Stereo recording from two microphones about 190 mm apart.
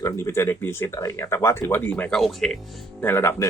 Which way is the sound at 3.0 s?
10° left (ahead or behind).